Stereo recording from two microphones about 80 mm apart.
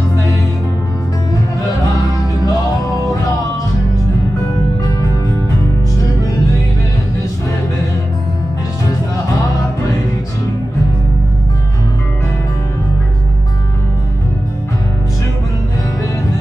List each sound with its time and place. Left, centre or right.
1.6 s music: left
4.8 s music: left